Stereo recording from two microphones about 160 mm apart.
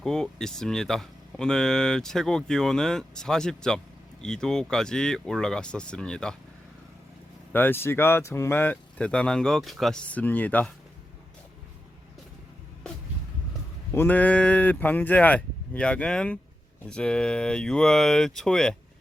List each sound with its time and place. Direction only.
0.0 s speech: 5° left (ahead or behind)
7.5 s speech: 15° left (ahead or behind)
13.9 s speech: 10° left (ahead or behind)